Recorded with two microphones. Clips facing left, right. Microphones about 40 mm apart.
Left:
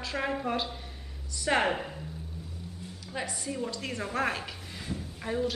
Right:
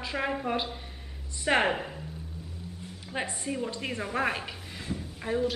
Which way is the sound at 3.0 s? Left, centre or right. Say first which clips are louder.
Right 2 dB; right.